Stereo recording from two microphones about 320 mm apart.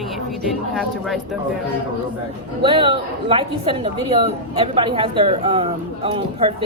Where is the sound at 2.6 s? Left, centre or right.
Centre.